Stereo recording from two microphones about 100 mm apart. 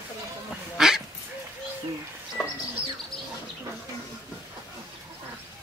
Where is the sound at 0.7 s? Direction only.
5° right (ahead or behind).